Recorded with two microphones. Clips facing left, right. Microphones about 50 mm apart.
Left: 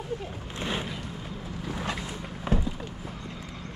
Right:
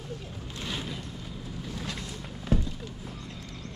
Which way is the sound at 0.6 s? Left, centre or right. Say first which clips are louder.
Left 4 dB; left.